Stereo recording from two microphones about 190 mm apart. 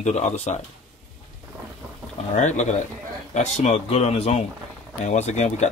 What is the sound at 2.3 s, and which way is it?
Speech, 40° left (ahead or behind).